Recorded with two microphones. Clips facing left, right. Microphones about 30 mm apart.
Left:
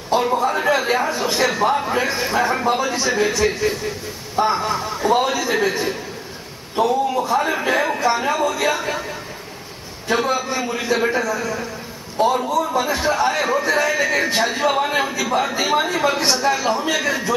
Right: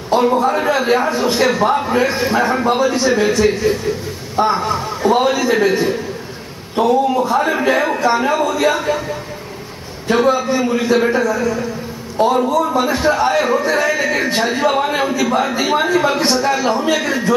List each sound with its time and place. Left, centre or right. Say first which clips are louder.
0.1 s a man's voice: right 4 dB; centre
10.0 s a man's voice: right 6 dB; centre